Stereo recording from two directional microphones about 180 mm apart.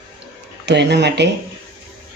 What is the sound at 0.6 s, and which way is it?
Speech, 70° right (ahead or behind).